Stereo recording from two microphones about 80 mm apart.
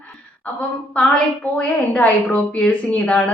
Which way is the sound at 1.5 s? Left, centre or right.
Left.